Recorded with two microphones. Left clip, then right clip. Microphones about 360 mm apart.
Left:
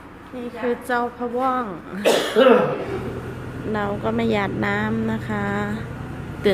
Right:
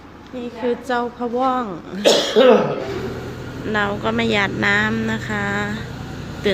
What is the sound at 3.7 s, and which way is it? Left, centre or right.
Speech, centre.